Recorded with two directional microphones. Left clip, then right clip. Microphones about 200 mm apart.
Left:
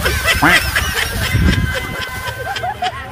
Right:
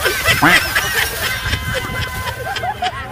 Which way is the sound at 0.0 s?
Centre (ahead or behind).